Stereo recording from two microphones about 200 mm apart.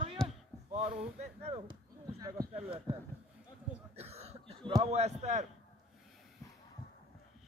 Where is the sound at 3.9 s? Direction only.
30° right (ahead or behind).